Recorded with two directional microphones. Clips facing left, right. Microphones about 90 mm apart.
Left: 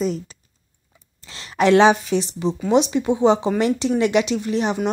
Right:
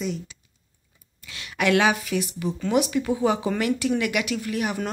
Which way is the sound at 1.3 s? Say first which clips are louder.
Left 6 dB; 30° left (ahead or behind).